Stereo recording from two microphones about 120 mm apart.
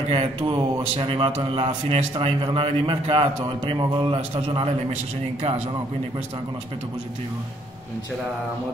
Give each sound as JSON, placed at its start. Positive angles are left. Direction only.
{"t": 0.1, "sound": "speech", "side_deg": -50}